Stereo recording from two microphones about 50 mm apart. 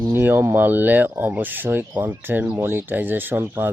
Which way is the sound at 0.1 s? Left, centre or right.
Right.